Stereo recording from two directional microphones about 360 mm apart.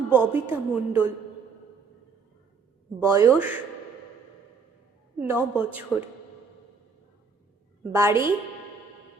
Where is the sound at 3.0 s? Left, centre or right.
Centre.